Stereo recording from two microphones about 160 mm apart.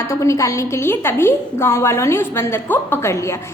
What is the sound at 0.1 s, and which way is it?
A woman's voice, 20° left (ahead or behind).